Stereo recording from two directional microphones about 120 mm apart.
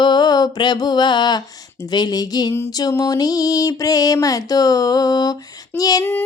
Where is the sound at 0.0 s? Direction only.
35° left (ahead or behind).